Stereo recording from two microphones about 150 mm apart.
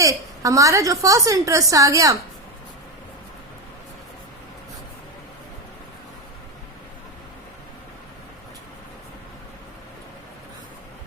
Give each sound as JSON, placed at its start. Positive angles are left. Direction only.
{"t": 0.0, "sound": "a woman's voice", "side_deg": -20}